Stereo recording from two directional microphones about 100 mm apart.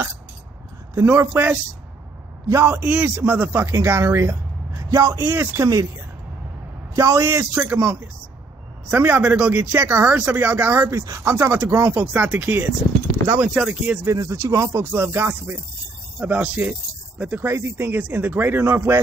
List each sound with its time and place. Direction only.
1.0 s speech: 20° right (ahead or behind)
7.0 s speech: 30° right (ahead or behind)
14.0 s speech: 30° right (ahead or behind)